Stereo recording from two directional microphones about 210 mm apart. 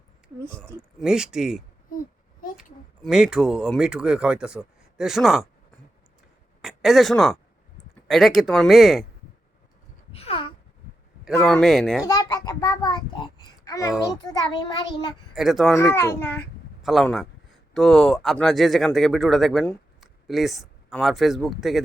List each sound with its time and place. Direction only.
0.9 s speech: 5° right (ahead or behind)
3.0 s speech: 5° right (ahead or behind)
6.6 s speech: centre (ahead or behind)
10.1 s a sound: 25° left (ahead or behind)
11.3 s speech: centre (ahead or behind)
12.0 s a sound: 20° left (ahead or behind)
14.2 s a child's voice: 20° left (ahead or behind)
15.4 s speech: centre (ahead or behind)
16.0 s a child's voice: 10° left (ahead or behind)
16.8 s speech: centre (ahead or behind)